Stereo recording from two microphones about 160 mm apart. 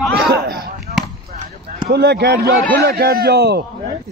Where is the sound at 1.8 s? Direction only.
90° right.